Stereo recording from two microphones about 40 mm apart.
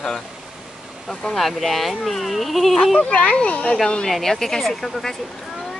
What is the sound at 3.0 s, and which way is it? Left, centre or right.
Speech, left.